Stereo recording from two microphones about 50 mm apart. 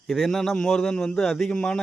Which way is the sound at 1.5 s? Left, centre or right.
Centre.